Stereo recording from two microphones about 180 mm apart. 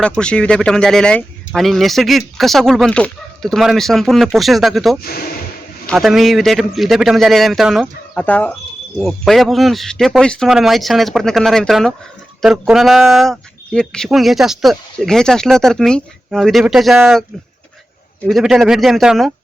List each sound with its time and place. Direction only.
0.0 s speech: 5° left (ahead or behind)
5.0 s speech: 55° left (ahead or behind)
5.8 s speech: centre (ahead or behind)
18.3 s speech: centre (ahead or behind)